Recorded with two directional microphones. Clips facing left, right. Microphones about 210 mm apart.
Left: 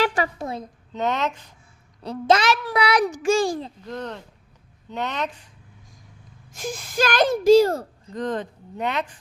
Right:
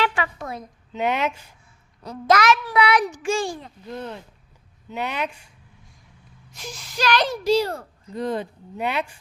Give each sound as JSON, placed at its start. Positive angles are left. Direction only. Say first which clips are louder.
{"t": 0.0, "sound": "a sound", "louder": "left 2 dB", "side_deg": 40}
{"t": 0.9, "sound": "speech", "louder": "right 1 dB", "side_deg": -10}
{"t": 2.0, "sound": "a child's voice", "louder": "even", "side_deg": 30}
{"t": 3.8, "sound": "speech", "louder": "left 1 dB", "side_deg": -10}
{"t": 6.5, "sound": "speech", "louder": "left 7 dB", "side_deg": 50}
{"t": 8.1, "sound": "speech", "louder": "right 1 dB", "side_deg": -10}